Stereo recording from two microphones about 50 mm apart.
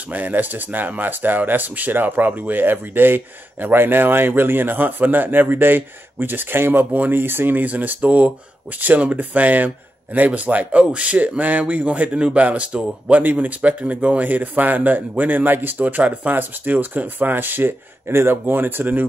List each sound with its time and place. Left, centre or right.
0.1 s a man's voice: right
15.8 s a man's voice: right